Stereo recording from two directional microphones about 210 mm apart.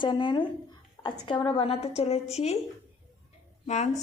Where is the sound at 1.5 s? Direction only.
25° left (ahead or behind).